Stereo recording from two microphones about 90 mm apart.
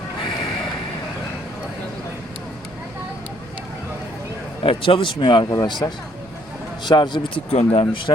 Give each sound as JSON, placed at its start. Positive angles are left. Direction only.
{"t": 4.6, "sound": "a man's voice", "side_deg": 90}
{"t": 5.8, "sound": "speech", "side_deg": 35}
{"t": 6.8, "sound": "a man's voice", "side_deg": 60}